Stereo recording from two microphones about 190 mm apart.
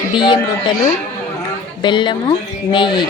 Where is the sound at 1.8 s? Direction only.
25° left (ahead or behind).